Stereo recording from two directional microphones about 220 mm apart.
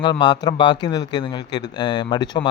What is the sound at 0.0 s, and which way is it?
A man's voice, 20° left (ahead or behind).